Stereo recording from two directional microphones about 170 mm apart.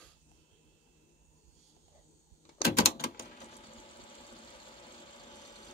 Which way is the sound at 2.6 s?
65° left (ahead or behind).